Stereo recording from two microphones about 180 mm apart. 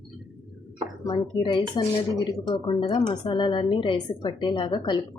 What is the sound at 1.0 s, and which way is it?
A woman's voice, 30° left (ahead or behind).